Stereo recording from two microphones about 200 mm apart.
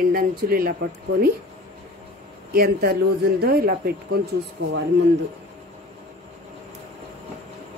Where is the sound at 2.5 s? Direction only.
50° right (ahead or behind).